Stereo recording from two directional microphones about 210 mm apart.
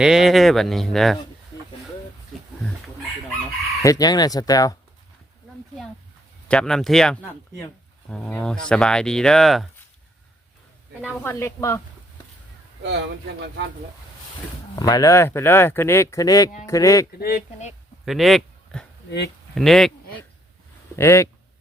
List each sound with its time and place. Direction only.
0.0 s speech: centre (ahead or behind)
3.8 s speech: 20° left (ahead or behind)
6.5 s speech: 5° left (ahead or behind)
11.0 s speech: 10° left (ahead or behind)
12.8 s speech: 55° right (ahead or behind)
14.8 s speech: 20° left (ahead or behind)
17.2 s speech: 45° left (ahead or behind)
18.0 s speech: centre (ahead or behind)
20.9 s speech: 15° left (ahead or behind)